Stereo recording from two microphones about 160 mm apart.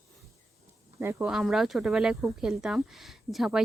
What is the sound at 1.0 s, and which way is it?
Speech, 15° right (ahead or behind).